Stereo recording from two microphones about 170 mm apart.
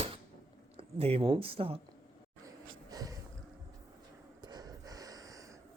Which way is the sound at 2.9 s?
20° right (ahead or behind).